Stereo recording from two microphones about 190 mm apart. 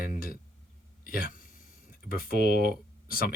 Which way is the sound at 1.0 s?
50° left (ahead or behind).